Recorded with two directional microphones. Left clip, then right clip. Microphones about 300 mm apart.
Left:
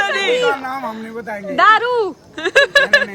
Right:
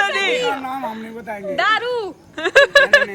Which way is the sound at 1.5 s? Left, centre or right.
Left.